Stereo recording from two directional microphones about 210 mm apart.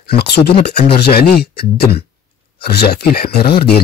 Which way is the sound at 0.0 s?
50° left (ahead or behind).